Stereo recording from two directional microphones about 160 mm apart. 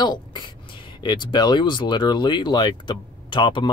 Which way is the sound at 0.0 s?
25° left (ahead or behind).